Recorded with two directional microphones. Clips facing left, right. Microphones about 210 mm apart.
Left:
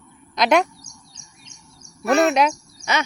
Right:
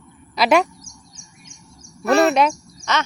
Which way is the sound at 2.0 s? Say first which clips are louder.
Right 2 dB; 35° right (ahead or behind).